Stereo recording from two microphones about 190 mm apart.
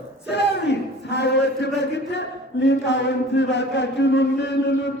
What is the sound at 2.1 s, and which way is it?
Chant, 65° left (ahead or behind).